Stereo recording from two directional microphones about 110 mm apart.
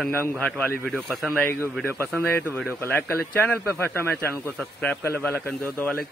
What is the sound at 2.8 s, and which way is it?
Speech, 20° left (ahead or behind).